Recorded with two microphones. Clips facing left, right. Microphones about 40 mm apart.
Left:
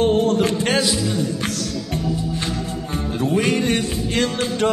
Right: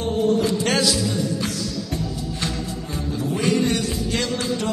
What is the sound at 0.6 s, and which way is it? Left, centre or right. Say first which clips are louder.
Speech: left 1 dB; left.